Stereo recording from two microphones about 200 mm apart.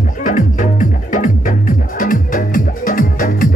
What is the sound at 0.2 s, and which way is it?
Music, 40° left (ahead or behind).